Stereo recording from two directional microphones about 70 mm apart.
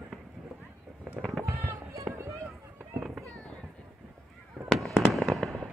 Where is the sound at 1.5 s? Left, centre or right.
Right.